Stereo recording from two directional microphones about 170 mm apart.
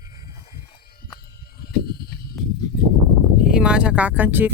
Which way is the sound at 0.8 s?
65° left (ahead or behind).